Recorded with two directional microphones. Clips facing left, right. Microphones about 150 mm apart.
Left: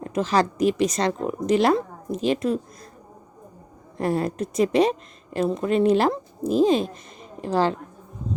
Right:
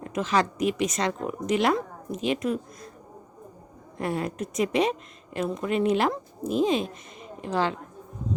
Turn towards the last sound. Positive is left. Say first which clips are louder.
# left 4 dB
turn(degrees=35)  # may be behind; listen again after turning